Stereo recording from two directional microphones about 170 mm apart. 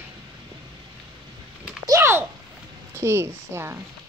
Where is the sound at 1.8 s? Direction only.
15° right (ahead or behind).